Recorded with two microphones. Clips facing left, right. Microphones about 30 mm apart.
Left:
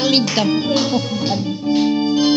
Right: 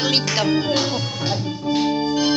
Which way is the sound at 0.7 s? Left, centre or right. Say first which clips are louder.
Left 4 dB; left.